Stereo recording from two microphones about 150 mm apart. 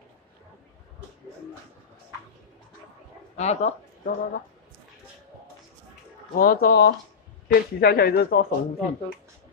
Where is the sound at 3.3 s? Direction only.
45° left (ahead or behind).